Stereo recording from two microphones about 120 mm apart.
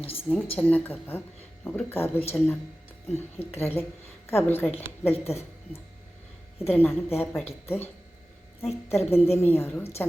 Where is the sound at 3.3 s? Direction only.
20° left (ahead or behind).